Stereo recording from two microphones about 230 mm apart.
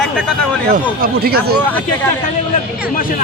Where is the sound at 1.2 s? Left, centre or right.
Right.